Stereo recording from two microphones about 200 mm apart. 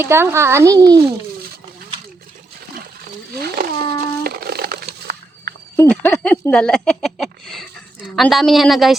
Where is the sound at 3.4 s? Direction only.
50° right (ahead or behind).